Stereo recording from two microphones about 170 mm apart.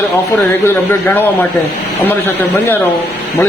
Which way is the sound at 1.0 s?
10° left (ahead or behind).